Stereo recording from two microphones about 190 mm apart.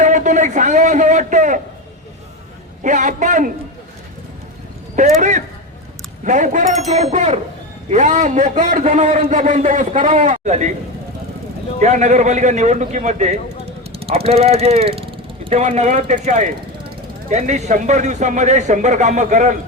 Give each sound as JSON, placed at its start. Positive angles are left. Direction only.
{"t": 0.0, "sound": "a man's voice", "side_deg": -40}
{"t": 2.8, "sound": "a man's voice", "side_deg": -40}
{"t": 4.9, "sound": "a man's voice", "side_deg": -40}
{"t": 11.8, "sound": "a man's voice", "side_deg": -40}